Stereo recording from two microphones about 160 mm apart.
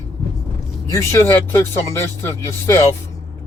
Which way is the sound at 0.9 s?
15° left (ahead or behind).